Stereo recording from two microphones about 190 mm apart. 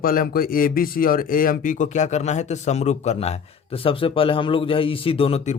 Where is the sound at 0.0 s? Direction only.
50° left (ahead or behind).